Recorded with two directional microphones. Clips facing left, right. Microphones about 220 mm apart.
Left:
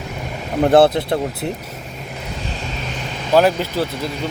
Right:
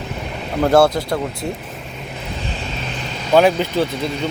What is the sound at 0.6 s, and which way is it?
Speech, 25° left (ahead or behind).